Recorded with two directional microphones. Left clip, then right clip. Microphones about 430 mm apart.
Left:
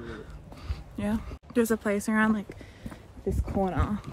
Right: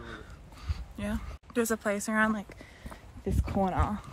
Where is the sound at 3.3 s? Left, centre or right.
Centre.